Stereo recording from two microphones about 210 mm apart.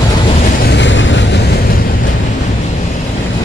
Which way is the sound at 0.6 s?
55° left (ahead or behind).